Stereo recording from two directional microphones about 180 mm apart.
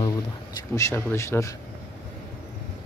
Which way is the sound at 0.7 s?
15° left (ahead or behind).